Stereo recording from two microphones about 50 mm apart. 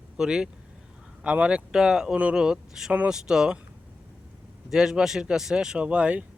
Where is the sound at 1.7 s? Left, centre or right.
Centre.